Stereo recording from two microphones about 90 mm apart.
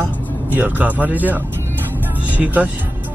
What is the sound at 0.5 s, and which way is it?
Speech, 20° right (ahead or behind).